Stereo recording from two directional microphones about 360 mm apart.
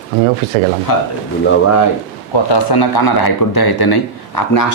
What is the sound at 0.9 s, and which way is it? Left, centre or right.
Speech, left.